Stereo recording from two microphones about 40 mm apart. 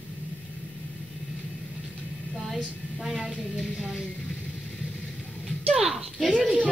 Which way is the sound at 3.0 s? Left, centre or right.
Centre.